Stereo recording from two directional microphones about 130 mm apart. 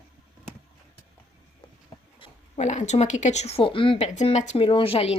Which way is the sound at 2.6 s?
65° left (ahead or behind).